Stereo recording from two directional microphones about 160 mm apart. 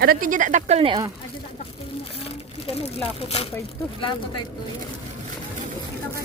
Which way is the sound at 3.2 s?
40° left (ahead or behind).